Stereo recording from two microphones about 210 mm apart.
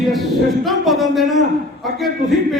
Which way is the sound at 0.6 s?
Centre (ahead or behind).